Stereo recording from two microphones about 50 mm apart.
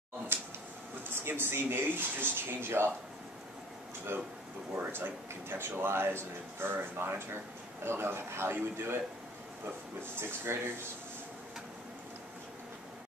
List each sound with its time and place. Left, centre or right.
0.3 s a sound: right
1.1 s speech: right
4.9 s a man's voice: right
10.1 s speech: right